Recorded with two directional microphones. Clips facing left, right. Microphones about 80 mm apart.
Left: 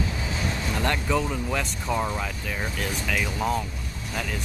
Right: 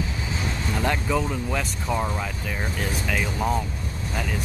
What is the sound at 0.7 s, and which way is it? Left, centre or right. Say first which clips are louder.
Speech: right 1 dB; centre.